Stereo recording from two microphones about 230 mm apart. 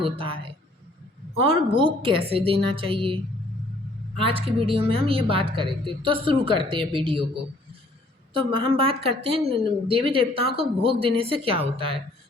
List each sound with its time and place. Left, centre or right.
0.0 s speech: right
1.5 s speech: right
4.4 s speech: right
8.3 s speech: right